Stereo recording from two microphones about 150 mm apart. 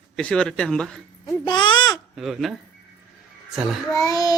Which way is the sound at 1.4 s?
30° left (ahead or behind).